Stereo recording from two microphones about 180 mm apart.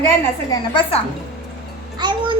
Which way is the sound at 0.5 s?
30° left (ahead or behind).